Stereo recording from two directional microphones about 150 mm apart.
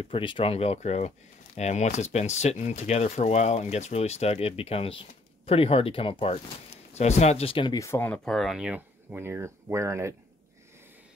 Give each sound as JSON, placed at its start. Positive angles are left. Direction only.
{"t": 0.0, "sound": "speech", "side_deg": 35}
{"t": 7.8, "sound": "speech", "side_deg": 15}